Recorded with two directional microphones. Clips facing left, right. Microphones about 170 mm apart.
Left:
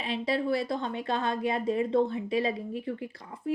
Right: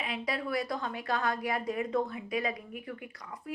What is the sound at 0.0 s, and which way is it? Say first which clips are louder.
Speech: left 6 dB; 30° left (ahead or behind).